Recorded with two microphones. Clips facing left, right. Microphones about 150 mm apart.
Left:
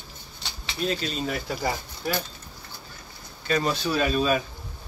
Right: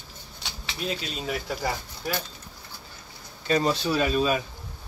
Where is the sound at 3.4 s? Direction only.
30° right (ahead or behind).